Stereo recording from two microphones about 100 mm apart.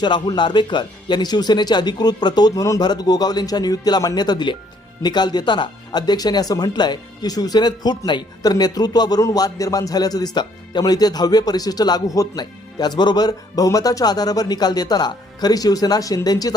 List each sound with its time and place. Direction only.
0.0 s a man's voice: 50° left (ahead or behind)